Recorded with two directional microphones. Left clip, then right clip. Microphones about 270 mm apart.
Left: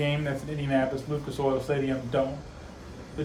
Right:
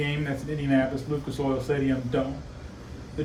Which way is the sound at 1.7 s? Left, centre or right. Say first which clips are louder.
Right 1 dB; centre.